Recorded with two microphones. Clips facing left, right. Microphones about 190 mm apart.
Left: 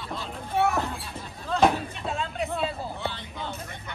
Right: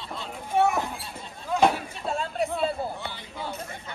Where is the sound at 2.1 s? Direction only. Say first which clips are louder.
Right 3 dB; 35° right (ahead or behind).